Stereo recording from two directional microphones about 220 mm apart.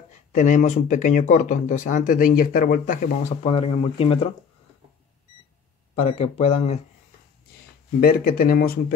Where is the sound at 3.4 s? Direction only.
25° left (ahead or behind).